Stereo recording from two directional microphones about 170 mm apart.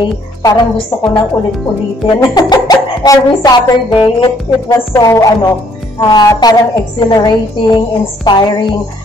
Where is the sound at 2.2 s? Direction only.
25° left (ahead or behind).